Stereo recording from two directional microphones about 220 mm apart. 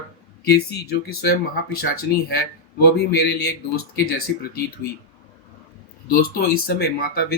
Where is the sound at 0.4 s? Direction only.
45° left (ahead or behind).